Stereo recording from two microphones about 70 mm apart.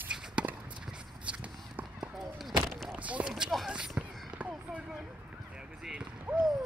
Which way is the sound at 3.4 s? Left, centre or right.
Centre.